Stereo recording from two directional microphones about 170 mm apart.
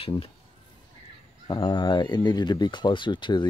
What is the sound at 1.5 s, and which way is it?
Speech, 25° left (ahead or behind).